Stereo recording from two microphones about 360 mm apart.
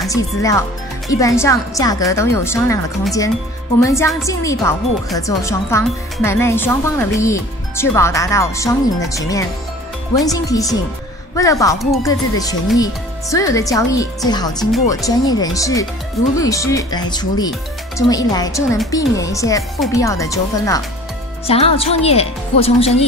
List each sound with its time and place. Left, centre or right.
0.0 s speech: centre